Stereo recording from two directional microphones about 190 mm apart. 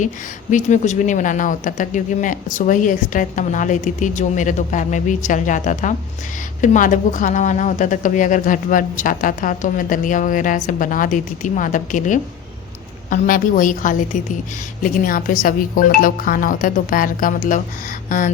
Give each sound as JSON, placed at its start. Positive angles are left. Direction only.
{"t": 0.5, "sound": "a woman's voice", "side_deg": 40}